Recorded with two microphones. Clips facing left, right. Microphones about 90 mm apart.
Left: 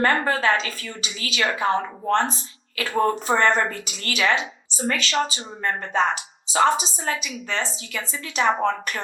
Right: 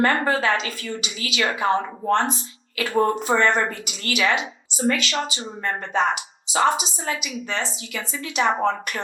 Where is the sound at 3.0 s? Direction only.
35° left (ahead or behind).